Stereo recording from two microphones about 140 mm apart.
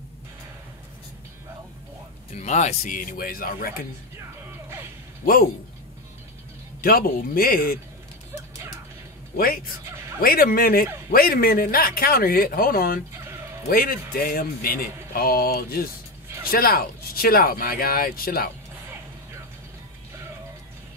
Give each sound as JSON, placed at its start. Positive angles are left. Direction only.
{"t": 2.3, "sound": "speech", "side_deg": 55}
{"t": 6.8, "sound": "speech", "side_deg": 90}
{"t": 9.4, "sound": "speech", "side_deg": 90}